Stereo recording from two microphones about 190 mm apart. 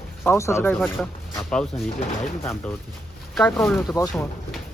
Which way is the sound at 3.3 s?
5° left (ahead or behind).